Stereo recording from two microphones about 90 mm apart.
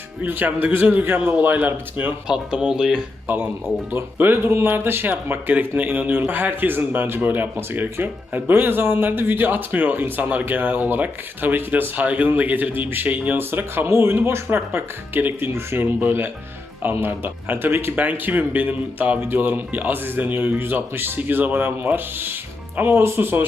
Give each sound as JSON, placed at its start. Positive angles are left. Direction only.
{"t": 0.3, "sound": "speech", "side_deg": -20}
{"t": 2.2, "sound": "speech", "side_deg": -10}
{"t": 3.2, "sound": "speech", "side_deg": -20}